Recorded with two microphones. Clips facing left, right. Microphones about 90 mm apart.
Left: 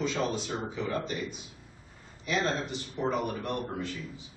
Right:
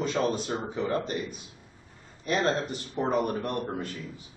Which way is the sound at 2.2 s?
45° right (ahead or behind).